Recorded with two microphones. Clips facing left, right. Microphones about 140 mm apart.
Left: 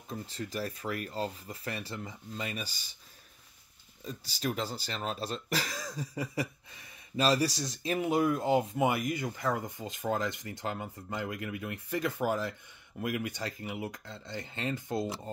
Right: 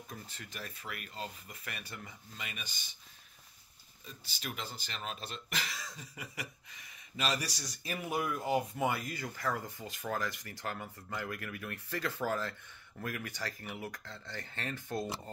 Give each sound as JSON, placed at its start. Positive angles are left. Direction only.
{"t": 0.1, "sound": "speech", "side_deg": 35}
{"t": 4.0, "sound": "speech", "side_deg": 35}